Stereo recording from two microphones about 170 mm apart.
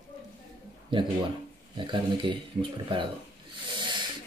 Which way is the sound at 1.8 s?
30° right (ahead or behind).